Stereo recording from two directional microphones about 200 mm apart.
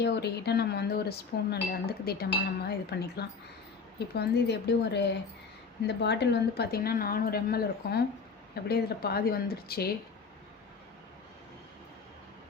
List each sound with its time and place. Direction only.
0.0 s speech: 55° left (ahead or behind)